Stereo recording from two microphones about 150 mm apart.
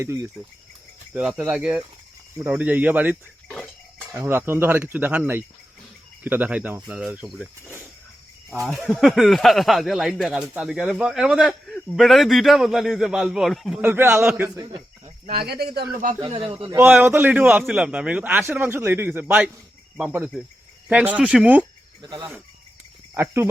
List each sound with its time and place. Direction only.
0.0 s a man's voice: 20° right (ahead or behind)
7.6 s a man's voice: 15° right (ahead or behind)
8.6 s speech: centre (ahead or behind)
13.8 s a man's voice: 15° right (ahead or behind)
14.5 s speech: 25° right (ahead or behind)
15.4 s speech: 90° right
16.2 s a man's voice: 35° right (ahead or behind)
16.7 s a man's voice: 15° right (ahead or behind)
22.0 s speech: 30° right (ahead or behind)
23.1 s speech: 15° right (ahead or behind)